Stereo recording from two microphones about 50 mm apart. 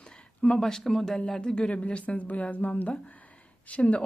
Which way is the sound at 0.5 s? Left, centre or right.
Centre.